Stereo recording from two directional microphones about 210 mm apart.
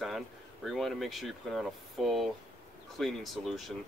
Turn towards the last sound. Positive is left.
turn(degrees=0)  # may be behind; listen again after turning